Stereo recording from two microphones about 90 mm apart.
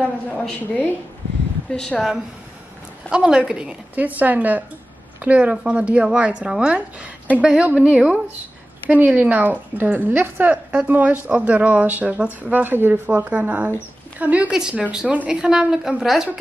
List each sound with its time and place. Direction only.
0.3 s a woman's voice: 15° left (ahead or behind)
3.1 s a woman's voice: 10° right (ahead or behind)